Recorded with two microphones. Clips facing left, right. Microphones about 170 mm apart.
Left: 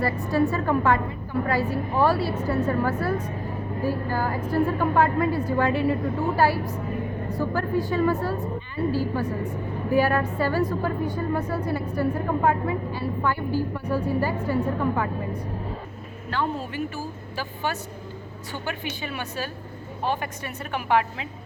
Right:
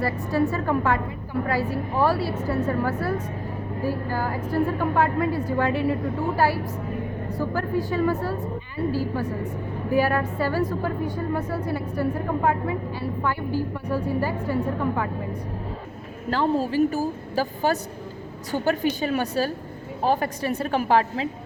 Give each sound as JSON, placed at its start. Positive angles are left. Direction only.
{"t": 0.0, "sound": "a woman's voice", "side_deg": -5}
{"t": 16.3, "sound": "a woman's voice", "side_deg": -35}